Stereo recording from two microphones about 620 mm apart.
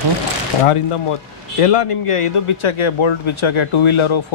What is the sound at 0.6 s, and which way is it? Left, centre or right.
A man's voice, left.